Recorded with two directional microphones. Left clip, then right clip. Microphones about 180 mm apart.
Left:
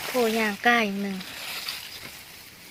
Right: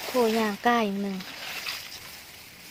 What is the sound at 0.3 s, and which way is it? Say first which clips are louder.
Speech: left 2 dB; 15° right (ahead or behind).